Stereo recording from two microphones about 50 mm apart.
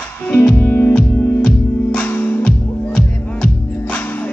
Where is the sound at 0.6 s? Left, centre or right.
Left.